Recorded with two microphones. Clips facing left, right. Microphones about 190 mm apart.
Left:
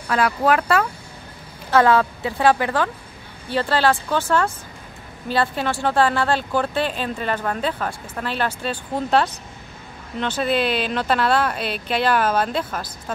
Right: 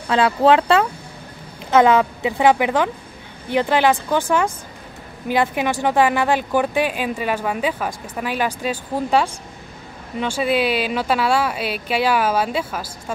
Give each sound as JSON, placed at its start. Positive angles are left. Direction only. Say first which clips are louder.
{"t": 0.1, "sound": "speech", "louder": "right 4 dB", "side_deg": -25}